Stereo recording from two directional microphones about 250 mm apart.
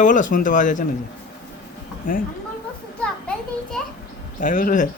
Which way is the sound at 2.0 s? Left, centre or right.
Left.